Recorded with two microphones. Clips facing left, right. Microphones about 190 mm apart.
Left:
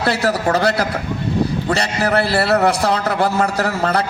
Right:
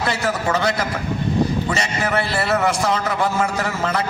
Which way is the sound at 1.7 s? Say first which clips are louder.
Left 4 dB; 65° left (ahead or behind).